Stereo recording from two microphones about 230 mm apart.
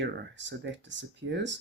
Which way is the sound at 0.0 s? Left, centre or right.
Right.